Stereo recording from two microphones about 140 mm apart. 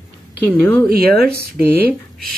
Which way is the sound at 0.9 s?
90° right.